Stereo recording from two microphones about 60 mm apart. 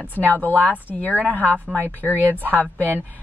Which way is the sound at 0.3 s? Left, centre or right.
Left.